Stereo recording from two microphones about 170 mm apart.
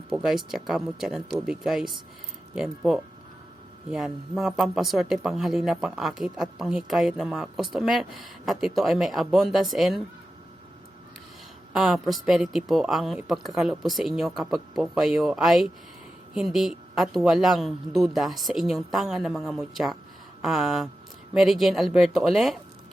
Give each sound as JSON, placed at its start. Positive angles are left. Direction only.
{"t": 0.1, "sound": "speech", "side_deg": 0}
{"t": 11.7, "sound": "speech", "side_deg": 0}